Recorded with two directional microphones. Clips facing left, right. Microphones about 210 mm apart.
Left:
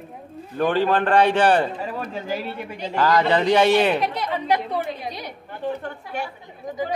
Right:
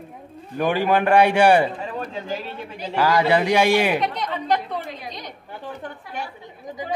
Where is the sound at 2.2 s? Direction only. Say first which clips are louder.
Left 2 dB; 10° left (ahead or behind).